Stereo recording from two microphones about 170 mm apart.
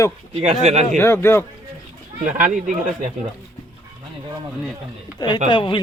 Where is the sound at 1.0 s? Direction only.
15° left (ahead or behind).